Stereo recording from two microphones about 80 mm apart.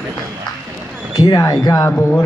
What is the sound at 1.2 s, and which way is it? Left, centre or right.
Speech, left.